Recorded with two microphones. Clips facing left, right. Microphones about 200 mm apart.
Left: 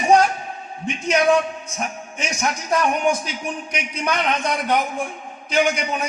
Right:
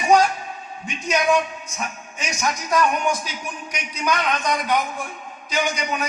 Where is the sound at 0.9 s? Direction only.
30° left (ahead or behind).